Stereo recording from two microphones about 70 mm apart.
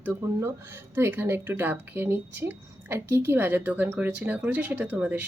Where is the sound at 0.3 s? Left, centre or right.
Right.